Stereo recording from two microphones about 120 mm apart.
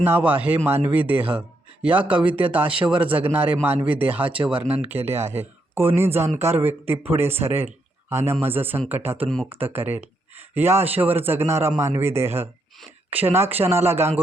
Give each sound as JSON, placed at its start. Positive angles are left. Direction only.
{"t": 0.0, "sound": "speech", "side_deg": -15}